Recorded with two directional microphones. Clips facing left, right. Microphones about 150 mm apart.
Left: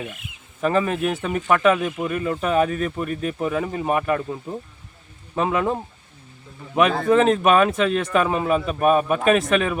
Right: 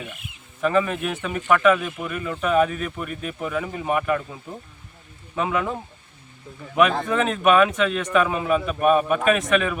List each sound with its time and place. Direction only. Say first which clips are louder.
0.6 s speech: left 1 dB; 35° left (ahead or behind)
5.3 s speech: left 3 dB; 35° left (ahead or behind)
6.7 s speech: left 3 dB; 35° left (ahead or behind)